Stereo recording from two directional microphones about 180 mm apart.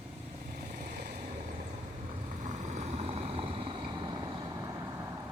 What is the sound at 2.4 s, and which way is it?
Vehicle, 40° right (ahead or behind).